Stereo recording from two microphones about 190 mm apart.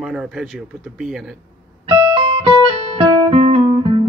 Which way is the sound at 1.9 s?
25° right (ahead or behind).